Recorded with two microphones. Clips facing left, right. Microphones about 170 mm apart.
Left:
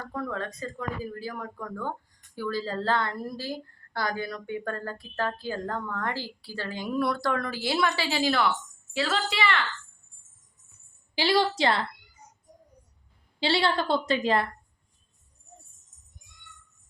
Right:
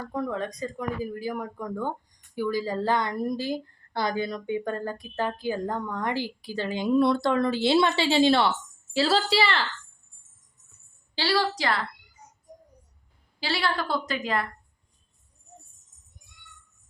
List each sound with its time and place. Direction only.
0.1 s a woman's voice: 15° right (ahead or behind); by 9.6 s 35° right (ahead or behind)
11.1 s a woman's voice: 15° left (ahead or behind)
13.4 s a woman's voice: 25° left (ahead or behind)